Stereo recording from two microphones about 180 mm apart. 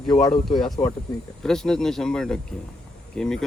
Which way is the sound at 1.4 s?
5° left (ahead or behind).